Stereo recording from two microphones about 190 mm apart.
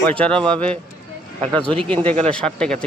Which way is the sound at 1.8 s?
5° left (ahead or behind).